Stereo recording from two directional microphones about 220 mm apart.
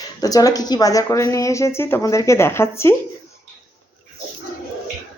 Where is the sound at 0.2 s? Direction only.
15° left (ahead or behind).